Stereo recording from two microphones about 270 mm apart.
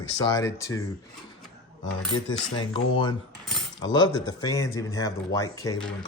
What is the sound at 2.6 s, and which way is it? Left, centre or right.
Speech, centre.